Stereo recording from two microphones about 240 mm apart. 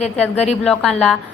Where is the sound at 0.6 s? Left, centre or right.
Centre.